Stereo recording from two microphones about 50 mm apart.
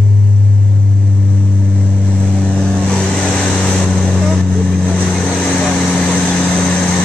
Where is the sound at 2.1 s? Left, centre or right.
Left.